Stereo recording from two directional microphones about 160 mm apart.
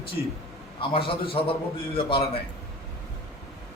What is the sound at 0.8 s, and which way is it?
A man's voice, 35° left (ahead or behind).